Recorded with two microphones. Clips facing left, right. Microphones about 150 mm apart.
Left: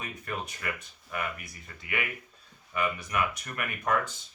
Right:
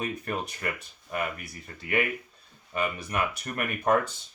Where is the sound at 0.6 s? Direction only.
40° right (ahead or behind).